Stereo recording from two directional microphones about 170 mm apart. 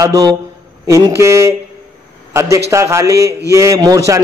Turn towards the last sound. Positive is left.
turn(degrees=-20)  # may be behind; listen again after turning